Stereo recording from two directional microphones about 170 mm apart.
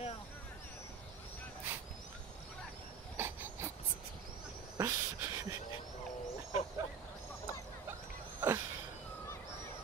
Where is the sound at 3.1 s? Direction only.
15° right (ahead or behind).